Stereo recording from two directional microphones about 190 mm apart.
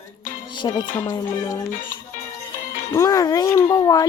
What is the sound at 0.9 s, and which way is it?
Speech, 15° left (ahead or behind).